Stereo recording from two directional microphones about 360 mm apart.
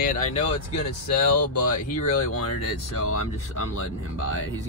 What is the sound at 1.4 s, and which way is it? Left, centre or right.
Speech, left.